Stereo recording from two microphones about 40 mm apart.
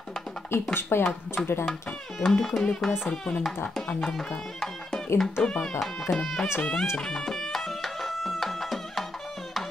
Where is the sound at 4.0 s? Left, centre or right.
Centre.